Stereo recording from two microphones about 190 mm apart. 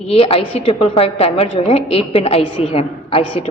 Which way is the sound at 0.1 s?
30° left (ahead or behind).